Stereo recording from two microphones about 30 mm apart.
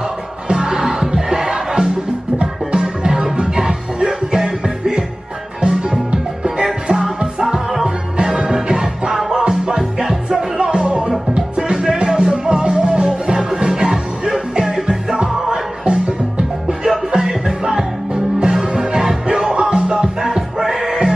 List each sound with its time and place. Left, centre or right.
0.5 s music: right
5.6 s music: right
14.6 s music: right
15.8 s music: right
20.6 s music: centre